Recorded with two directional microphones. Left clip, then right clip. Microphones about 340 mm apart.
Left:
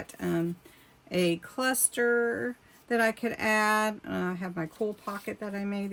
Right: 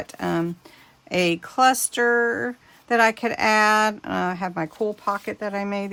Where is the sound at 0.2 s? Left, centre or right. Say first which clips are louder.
Right 6 dB; right.